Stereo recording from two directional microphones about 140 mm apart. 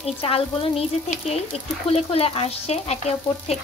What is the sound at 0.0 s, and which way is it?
Frying, 45° left (ahead or behind).